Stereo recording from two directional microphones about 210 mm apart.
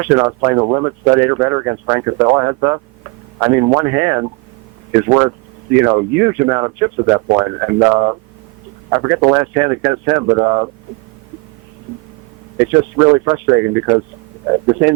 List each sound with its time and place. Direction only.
0.0 s speech: 15° right (ahead or behind)
12.5 s speech: 15° right (ahead or behind)